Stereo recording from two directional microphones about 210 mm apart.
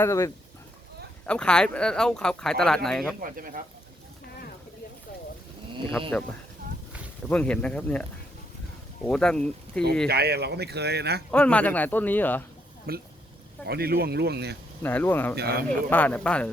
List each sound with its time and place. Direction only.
0.0 s a man's voice: 15° left (ahead or behind)
3.2 s speech: 40° right (ahead or behind)
7.3 s speech: 5° left (ahead or behind)
9.0 s speech: 5° left (ahead or behind)
10.1 s speech: 50° right (ahead or behind)
11.3 s a man's voice: 5° left (ahead or behind)
12.9 s speech: 45° right (ahead or behind)
14.8 s a man's voice: 10° left (ahead or behind)
15.4 s speech: 45° right (ahead or behind)
15.7 s a man's voice: 10° left (ahead or behind)